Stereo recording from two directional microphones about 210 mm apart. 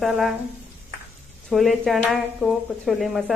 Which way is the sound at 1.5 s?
Centre (ahead or behind).